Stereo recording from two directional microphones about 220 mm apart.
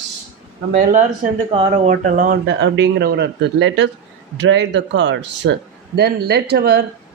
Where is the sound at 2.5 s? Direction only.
55° right (ahead or behind).